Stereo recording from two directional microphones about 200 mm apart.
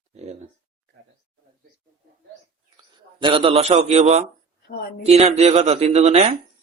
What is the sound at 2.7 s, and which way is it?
A man's voice, 25° right (ahead or behind).